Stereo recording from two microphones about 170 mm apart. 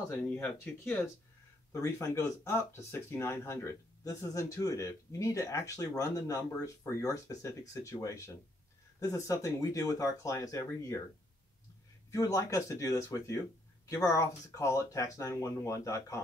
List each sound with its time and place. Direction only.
0.2 s speech: 10° left (ahead or behind)
12.1 s speech: 20° left (ahead or behind)